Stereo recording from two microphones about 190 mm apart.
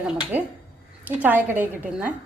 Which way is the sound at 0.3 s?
10° right (ahead or behind).